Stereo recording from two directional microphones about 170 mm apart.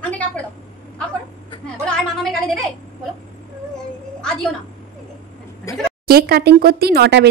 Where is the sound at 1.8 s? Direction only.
5° left (ahead or behind).